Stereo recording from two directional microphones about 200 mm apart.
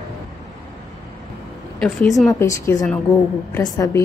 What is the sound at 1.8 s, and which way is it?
Speech, centre (ahead or behind).